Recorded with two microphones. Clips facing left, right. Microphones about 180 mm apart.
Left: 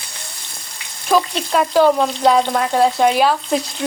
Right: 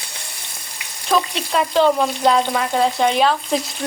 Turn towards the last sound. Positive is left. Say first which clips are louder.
# left 1 dB
turn(degrees=5)  # may be behind; listen again after turning